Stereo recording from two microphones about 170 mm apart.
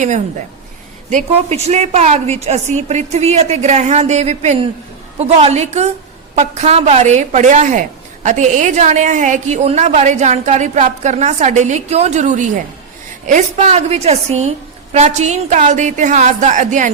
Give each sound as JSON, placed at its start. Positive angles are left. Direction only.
{"t": 1.1, "sound": "a woman's voice", "side_deg": -40}